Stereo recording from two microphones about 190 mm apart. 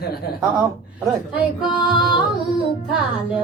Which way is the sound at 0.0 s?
55° left (ahead or behind).